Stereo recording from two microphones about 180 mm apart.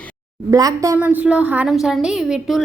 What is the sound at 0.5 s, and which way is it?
Speech, 20° right (ahead or behind).